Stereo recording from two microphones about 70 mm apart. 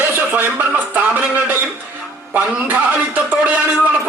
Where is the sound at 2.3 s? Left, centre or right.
Right.